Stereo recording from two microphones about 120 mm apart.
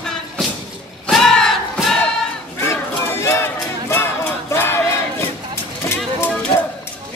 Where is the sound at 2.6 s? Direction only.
20° left (ahead or behind).